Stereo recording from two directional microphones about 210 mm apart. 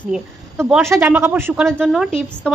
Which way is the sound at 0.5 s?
15° right (ahead or behind).